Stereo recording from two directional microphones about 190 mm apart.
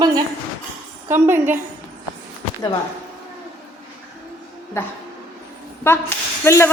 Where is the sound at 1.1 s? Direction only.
10° right (ahead or behind).